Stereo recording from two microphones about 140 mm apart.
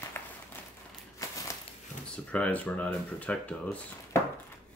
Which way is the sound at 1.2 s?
25° left (ahead or behind).